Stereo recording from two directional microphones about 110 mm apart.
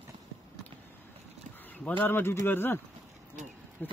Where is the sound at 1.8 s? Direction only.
20° left (ahead or behind).